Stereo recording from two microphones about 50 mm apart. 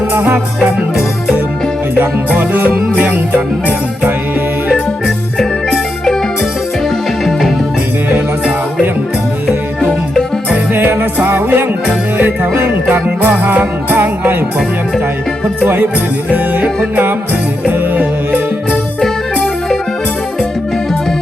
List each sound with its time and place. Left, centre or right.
0.1 s music: right
2.4 s music: right
4.7 s music: centre
10.8 s music: right
15.6 s music: right